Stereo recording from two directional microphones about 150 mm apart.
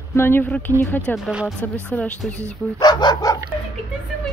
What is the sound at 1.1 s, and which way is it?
Speech, 5° right (ahead or behind).